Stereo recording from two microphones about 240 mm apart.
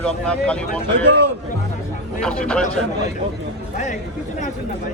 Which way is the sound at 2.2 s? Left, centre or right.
Centre.